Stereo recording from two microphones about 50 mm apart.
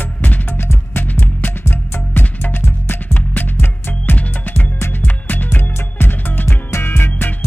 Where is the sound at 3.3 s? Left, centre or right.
Left.